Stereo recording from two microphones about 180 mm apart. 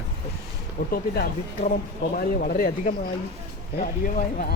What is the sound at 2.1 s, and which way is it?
Speech, 55° left (ahead or behind).